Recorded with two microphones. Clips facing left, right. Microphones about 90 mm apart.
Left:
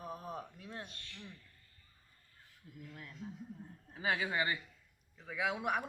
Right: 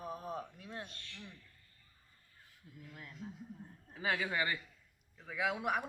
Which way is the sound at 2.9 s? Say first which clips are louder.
Right 1 dB; 15° right (ahead or behind).